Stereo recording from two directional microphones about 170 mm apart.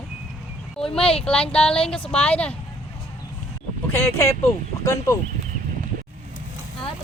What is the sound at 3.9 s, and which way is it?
A woman's voice, 15° left (ahead or behind).